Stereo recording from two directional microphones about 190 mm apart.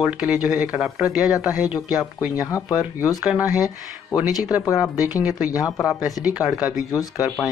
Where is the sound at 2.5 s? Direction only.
15° left (ahead or behind).